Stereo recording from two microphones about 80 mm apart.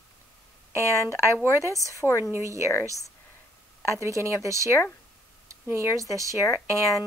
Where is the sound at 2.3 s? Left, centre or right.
Right.